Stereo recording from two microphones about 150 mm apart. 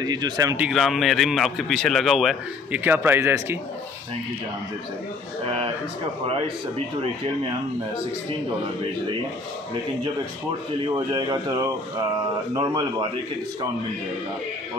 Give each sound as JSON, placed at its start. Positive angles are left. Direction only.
{"t": 0.0, "sound": "speech", "side_deg": -25}
{"t": 0.6, "sound": "a man's voice", "side_deg": -5}
{"t": 2.8, "sound": "speech", "side_deg": -15}
{"t": 11.1, "sound": "speech", "side_deg": -30}